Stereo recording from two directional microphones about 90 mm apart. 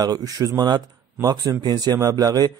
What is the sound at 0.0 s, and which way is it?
A man's voice, 45° right (ahead or behind).